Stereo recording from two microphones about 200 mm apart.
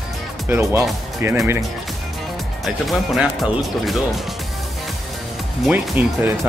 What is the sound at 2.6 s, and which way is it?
Speech, centre (ahead or behind).